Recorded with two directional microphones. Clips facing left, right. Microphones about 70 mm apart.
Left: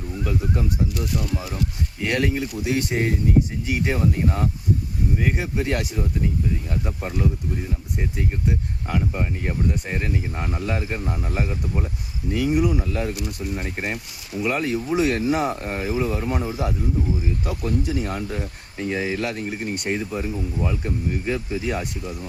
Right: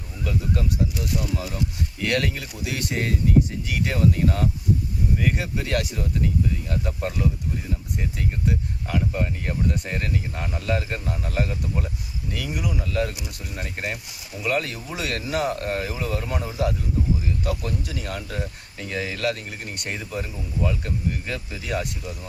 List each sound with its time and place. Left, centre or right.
2.0 s speech: centre
12.5 s speech: left